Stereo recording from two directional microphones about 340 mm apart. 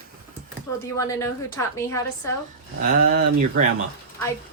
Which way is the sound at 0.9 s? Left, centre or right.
Centre.